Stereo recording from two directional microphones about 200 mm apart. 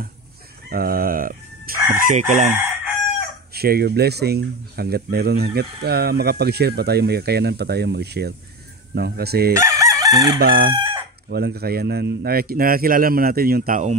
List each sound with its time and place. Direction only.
0.7 s speech: 50° right (ahead or behind)
2.0 s chicken: 40° right (ahead or behind)
3.5 s speech: 50° right (ahead or behind)
9.5 s chicken: 15° right (ahead or behind)
10.4 s speech: 50° right (ahead or behind)
10.7 s chicken: 25° right (ahead or behind)
11.2 s speech: 55° right (ahead or behind)